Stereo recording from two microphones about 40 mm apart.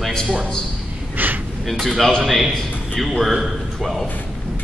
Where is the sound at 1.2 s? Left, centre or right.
Right.